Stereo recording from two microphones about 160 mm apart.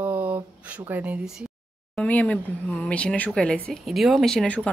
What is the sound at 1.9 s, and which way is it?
A woman's voice, 10° left (ahead or behind).